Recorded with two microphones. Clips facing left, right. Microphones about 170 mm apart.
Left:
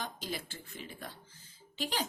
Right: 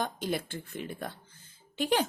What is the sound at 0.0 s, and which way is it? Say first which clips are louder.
A woman's voice: right 8 dB; 55° right (ahead or behind).